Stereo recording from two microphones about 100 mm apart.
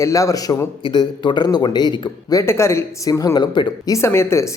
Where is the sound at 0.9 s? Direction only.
50° left (ahead or behind).